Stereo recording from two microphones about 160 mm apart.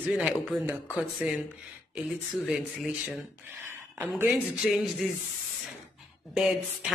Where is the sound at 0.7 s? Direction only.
5° right (ahead or behind).